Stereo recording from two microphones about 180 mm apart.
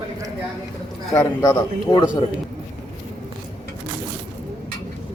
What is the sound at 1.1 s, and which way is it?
Speech, 20° left (ahead or behind).